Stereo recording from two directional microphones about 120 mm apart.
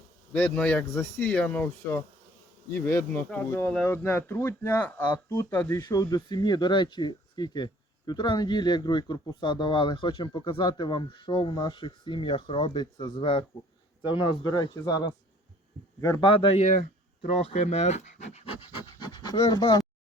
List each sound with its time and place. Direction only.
0.3 s speech: 10° left (ahead or behind)
2.6 s insect: 20° left (ahead or behind)
3.7 s speech: 5° left (ahead or behind)
3.9 s speech: 20° left (ahead or behind)
5.1 s speech: 25° left (ahead or behind); by 11.3 s 45° left (ahead or behind)
11.4 s insect: 30° left (ahead or behind)
11.7 s a man's voice: 45° left (ahead or behind); by 16.2 s 25° left (ahead or behind)
17.6 s speech: 70° left (ahead or behind)
18.6 s speech: 45° left (ahead or behind)